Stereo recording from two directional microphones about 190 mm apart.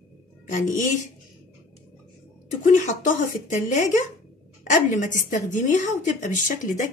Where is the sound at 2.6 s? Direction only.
40° left (ahead or behind).